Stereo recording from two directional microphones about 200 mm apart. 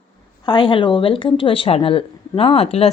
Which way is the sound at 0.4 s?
25° left (ahead or behind).